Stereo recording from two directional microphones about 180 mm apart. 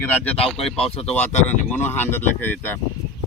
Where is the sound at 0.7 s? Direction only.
35° left (ahead or behind).